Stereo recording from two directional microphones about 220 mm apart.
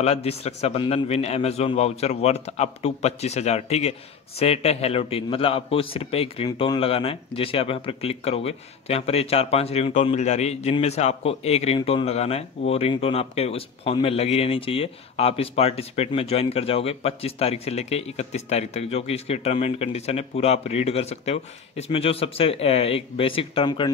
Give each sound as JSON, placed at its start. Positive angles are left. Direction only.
{"t": 0.0, "sound": "a man's voice", "side_deg": 25}